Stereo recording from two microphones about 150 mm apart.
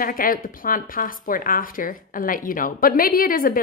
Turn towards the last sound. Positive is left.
turn(degrees=70)  # may be behind; listen again after turning